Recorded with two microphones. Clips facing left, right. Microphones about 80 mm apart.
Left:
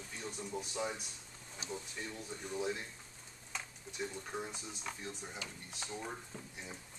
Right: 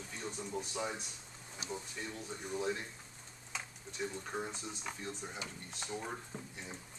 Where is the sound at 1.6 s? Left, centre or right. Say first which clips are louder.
Right 1 dB; left.